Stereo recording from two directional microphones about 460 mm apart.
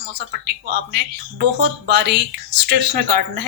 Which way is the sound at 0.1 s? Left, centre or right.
Right.